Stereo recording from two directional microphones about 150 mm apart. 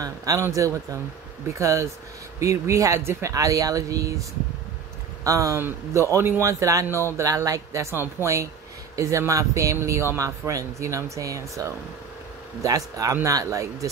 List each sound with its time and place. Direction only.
0.0 s speech: 25° right (ahead or behind)
1.5 s speech: 20° right (ahead or behind)